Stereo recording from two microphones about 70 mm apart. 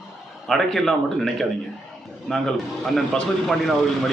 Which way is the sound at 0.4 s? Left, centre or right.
Centre.